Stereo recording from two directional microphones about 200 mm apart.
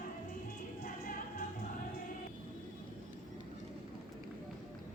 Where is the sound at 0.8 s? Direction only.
45° left (ahead or behind).